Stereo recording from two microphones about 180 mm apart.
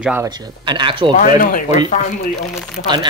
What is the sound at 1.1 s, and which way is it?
Speech, 50° left (ahead or behind).